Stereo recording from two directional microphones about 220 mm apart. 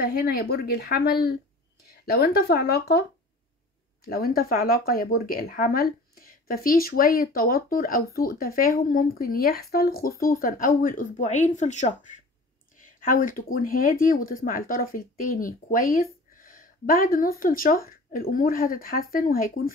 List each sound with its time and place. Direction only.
0.0 s speech: 45° left (ahead or behind)